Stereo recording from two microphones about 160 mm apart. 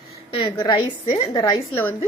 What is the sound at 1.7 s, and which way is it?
Speech, 10° left (ahead or behind).